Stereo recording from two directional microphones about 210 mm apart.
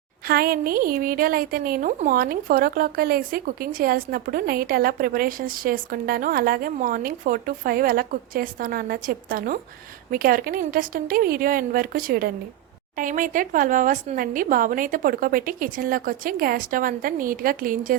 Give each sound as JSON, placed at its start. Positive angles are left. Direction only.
{"t": 0.3, "sound": "a woman's voice", "side_deg": -45}